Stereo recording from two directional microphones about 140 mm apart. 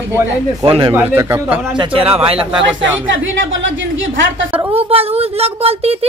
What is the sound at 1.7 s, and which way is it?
Speech, 40° right (ahead or behind).